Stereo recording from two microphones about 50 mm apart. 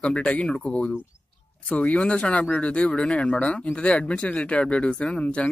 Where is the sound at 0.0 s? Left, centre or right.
Left.